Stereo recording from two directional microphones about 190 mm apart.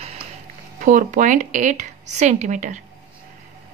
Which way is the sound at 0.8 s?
45° right (ahead or behind).